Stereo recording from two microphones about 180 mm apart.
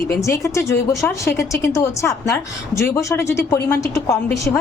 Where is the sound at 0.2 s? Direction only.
15° left (ahead or behind).